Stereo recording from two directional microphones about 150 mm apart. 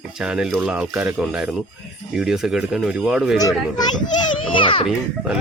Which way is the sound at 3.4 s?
25° left (ahead or behind).